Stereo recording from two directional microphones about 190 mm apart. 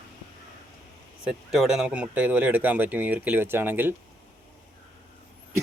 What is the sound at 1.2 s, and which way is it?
Speech, 5° right (ahead or behind).